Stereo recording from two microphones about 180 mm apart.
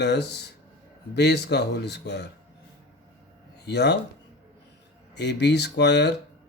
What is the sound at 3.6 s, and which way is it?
Speech, 70° left (ahead or behind).